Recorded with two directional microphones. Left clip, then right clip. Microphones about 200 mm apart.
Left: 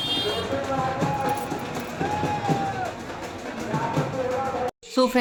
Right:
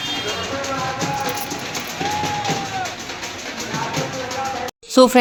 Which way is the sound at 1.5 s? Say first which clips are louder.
Right 4 dB; 45° left (ahead or behind).